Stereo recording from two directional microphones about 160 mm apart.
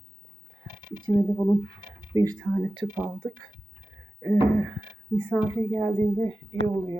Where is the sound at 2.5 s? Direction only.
5° right (ahead or behind).